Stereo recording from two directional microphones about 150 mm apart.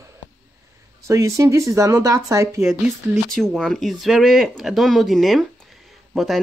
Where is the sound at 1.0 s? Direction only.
20° right (ahead or behind).